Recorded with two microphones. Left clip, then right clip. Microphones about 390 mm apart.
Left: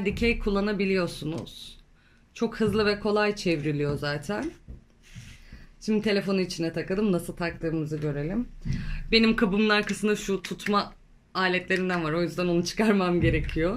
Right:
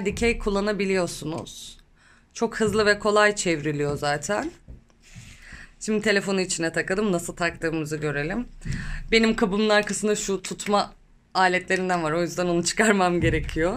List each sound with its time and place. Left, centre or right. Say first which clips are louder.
0.0 s speech: right 2 dB; centre
5.9 s speech: right 3 dB; centre